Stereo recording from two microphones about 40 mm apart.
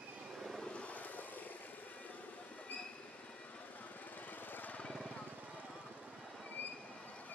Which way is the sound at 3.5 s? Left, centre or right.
Left.